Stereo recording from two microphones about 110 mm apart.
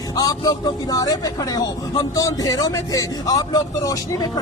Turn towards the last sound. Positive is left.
turn(degrees=35)  # may be behind; listen again after turning